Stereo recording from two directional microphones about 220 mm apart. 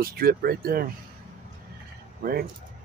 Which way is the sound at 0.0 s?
40° right (ahead or behind).